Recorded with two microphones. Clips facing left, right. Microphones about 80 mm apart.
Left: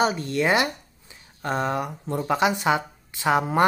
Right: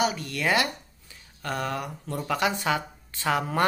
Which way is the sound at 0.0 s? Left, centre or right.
Left.